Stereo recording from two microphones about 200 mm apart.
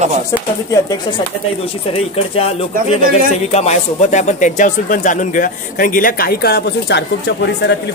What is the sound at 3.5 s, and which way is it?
Speech, 35° left (ahead or behind).